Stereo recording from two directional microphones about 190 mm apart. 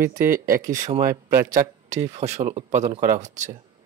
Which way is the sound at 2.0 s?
35° right (ahead or behind).